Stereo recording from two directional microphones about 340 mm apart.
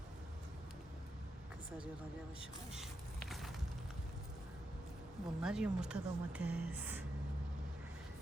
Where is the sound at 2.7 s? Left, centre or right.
Centre.